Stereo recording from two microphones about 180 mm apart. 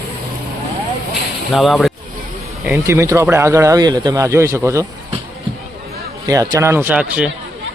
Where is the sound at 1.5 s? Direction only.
Centre (ahead or behind).